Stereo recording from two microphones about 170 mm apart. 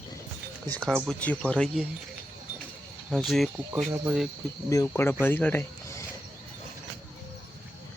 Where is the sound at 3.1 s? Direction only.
Centre (ahead or behind).